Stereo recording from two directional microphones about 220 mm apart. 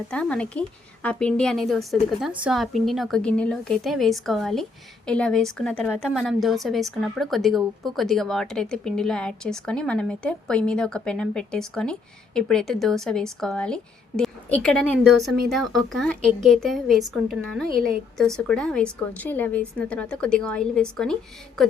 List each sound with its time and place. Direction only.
0.1 s a woman's voice: 5° left (ahead or behind)
17.7 s speech: 40° right (ahead or behind)
18.2 s a woman's voice: 5° left (ahead or behind)